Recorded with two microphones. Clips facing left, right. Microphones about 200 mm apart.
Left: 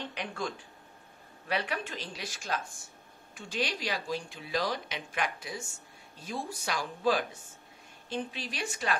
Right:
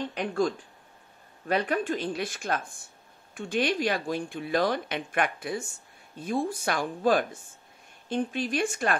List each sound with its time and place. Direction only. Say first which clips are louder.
0.1 s speech: right 10 dB; 50° right (ahead or behind)
1.5 s speech: right 7 dB; 50° right (ahead or behind)